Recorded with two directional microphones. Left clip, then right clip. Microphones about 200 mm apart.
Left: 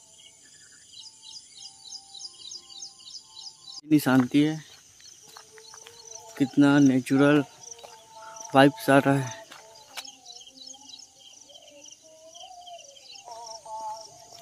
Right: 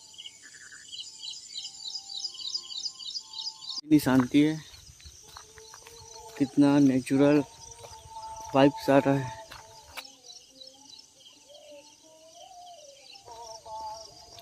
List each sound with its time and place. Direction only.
1.9 s music: 5° right (ahead or behind)
3.6 s speech: 10° left (ahead or behind)
6.3 s speech: 20° left (ahead or behind)
8.5 s speech: 20° left (ahead or behind)